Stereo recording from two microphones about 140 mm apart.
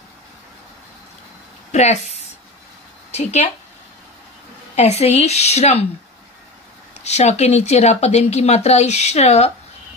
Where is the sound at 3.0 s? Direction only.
50° left (ahead or behind).